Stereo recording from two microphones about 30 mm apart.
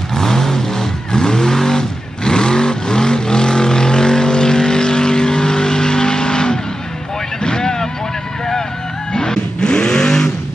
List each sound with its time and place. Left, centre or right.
0.1 s vehicle: centre
9.1 s vehicle: left